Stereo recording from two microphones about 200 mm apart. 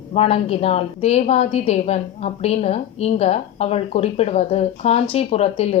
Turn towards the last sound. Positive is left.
turn(degrees=30)  # may be behind; listen again after turning